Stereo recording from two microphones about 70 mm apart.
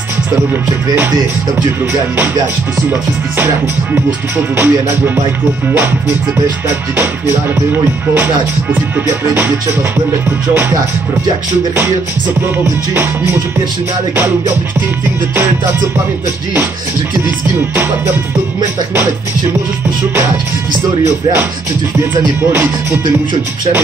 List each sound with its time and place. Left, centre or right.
2.9 s music: right
9.3 s music: right
12.9 s music: right
22.1 s music: right